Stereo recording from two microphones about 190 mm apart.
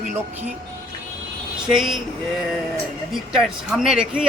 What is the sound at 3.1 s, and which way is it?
Speech, centre (ahead or behind).